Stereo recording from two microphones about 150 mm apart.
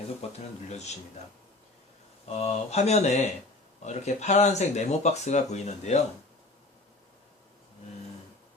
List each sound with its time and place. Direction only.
0.2 s speech: 45° left (ahead or behind)
2.3 s speech: 45° left (ahead or behind)